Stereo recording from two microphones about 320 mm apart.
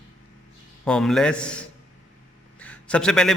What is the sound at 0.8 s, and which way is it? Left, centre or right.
Speech, centre.